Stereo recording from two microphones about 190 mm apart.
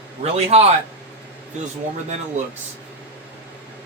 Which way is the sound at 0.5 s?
35° right (ahead or behind).